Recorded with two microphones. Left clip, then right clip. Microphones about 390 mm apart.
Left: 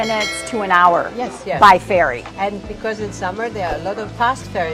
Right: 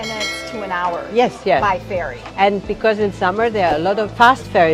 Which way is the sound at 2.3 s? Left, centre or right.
Right.